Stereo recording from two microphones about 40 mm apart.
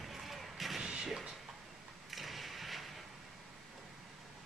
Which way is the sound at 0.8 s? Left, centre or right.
Centre.